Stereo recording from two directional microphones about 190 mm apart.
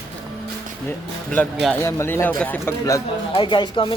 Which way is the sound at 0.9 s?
10° left (ahead or behind).